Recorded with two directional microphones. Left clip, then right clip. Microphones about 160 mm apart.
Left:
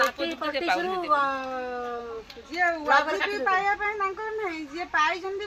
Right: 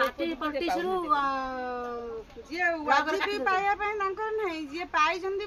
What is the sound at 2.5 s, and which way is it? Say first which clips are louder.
A woman's voice: left 3 dB; 45° right (ahead or behind).